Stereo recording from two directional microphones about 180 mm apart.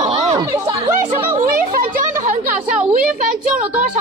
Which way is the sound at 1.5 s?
50° right (ahead or behind).